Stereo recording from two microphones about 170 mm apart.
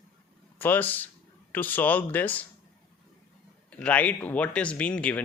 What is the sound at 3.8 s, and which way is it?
Speech, 10° left (ahead or behind).